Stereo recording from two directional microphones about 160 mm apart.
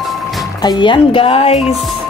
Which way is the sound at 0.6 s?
25° left (ahead or behind).